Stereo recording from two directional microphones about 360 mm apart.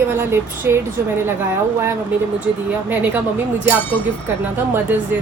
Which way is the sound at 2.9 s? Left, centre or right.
Centre.